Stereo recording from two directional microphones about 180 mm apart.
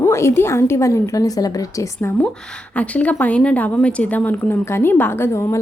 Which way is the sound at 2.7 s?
10° left (ahead or behind).